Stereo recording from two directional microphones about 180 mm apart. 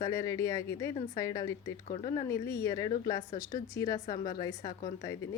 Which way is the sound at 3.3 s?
50° left (ahead or behind).